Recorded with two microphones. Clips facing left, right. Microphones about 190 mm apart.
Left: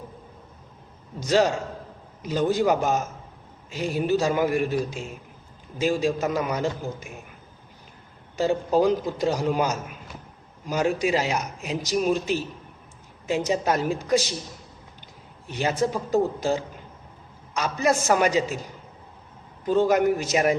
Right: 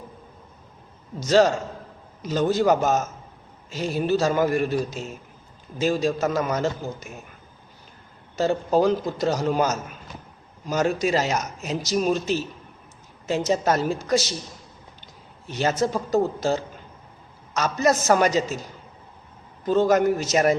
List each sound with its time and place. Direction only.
1.2 s a man's voice: 15° left (ahead or behind)
4.9 s speech: 40° right (ahead or behind)
5.8 s a man's voice: 10° left (ahead or behind)
9.4 s a man's voice: 15° left (ahead or behind)
11.3 s speech: 40° right (ahead or behind)
11.8 s a man's voice: 15° left (ahead or behind)
15.4 s a man's voice: 10° left (ahead or behind)
19.6 s a man's voice: 15° left (ahead or behind)